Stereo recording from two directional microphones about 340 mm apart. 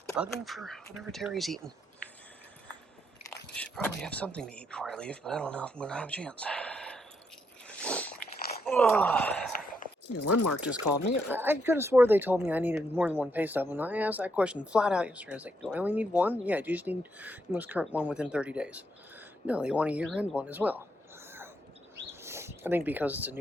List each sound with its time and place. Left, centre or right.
0.2 s speech: centre
3.2 s speech: centre
7.8 s biting: centre
8.6 s speech: centre
9.8 s a sound: left
10.2 s speech: left
11.3 s speech: centre
21.2 s a sound: centre
22.2 s speech: centre